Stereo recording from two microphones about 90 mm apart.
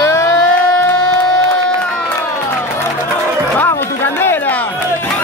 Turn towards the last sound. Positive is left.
turn(degrees=25)  # may be behind; listen again after turning